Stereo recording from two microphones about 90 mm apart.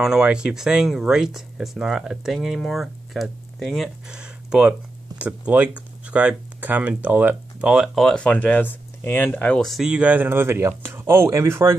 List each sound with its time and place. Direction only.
0.0 s speech: 5° right (ahead or behind)
4.2 s a sound: 10° right (ahead or behind)
5.2 s speech: 15° right (ahead or behind)
7.7 s speech: centre (ahead or behind); by 9.3 s 20° left (ahead or behind)
9.3 s speech: 10° left (ahead or behind)
9.7 s speech: 5° right (ahead or behind); by 11.7 s 30° right (ahead or behind)